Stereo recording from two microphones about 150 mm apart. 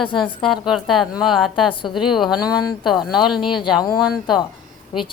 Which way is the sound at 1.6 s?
35° left (ahead or behind).